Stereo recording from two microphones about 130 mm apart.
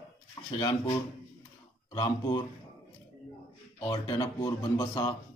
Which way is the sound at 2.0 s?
30° left (ahead or behind).